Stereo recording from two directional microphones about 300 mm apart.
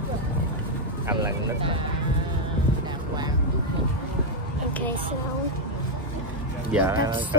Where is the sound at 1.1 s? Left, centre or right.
Centre.